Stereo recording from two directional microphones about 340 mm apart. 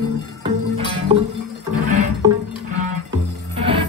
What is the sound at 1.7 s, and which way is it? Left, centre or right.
Music, right.